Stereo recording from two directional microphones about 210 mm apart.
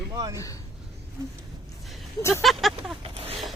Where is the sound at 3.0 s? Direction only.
25° right (ahead or behind).